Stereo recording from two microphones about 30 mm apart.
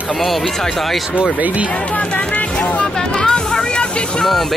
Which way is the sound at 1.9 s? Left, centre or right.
Left.